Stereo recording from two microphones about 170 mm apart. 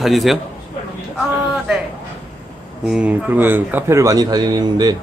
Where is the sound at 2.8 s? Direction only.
5° right (ahead or behind); by 5.0 s 25° right (ahead or behind).